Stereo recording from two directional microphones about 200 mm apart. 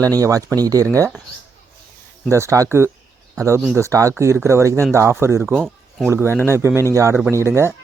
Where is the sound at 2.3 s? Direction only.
15° right (ahead or behind).